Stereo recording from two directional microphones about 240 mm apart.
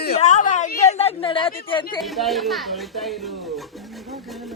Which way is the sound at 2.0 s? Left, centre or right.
Centre.